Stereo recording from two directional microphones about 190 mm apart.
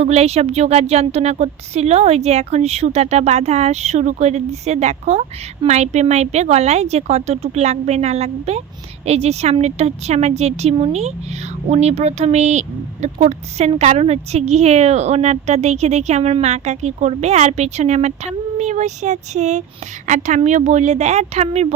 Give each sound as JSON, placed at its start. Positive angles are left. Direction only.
{"t": 0.0, "sound": "speech", "side_deg": -35}